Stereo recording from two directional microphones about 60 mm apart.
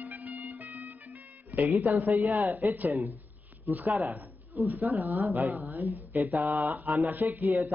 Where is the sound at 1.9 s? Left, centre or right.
Right.